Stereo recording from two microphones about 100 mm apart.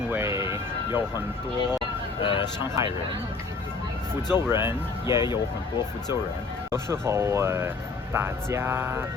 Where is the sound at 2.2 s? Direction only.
55° left (ahead or behind).